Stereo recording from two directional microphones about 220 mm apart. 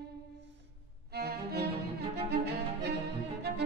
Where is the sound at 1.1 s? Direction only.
45° right (ahead or behind).